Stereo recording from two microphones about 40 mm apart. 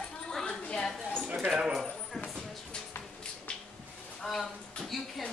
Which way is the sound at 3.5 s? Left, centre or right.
Left.